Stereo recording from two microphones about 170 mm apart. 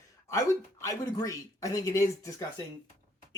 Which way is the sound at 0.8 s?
20° left (ahead or behind).